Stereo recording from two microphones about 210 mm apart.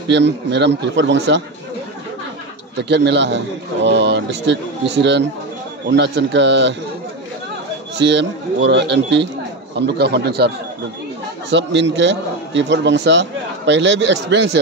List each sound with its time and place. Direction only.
0.1 s a man's voice: 55° right (ahead or behind)
2.8 s a man's voice: 55° right (ahead or behind)
8.0 s a man's voice: 55° right (ahead or behind)
11.5 s a man's voice: 55° right (ahead or behind)